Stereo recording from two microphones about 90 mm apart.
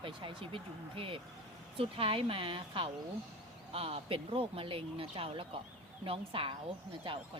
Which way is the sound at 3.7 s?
90° right.